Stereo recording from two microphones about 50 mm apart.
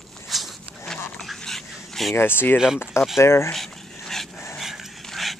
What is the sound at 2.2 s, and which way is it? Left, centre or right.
Speech, left.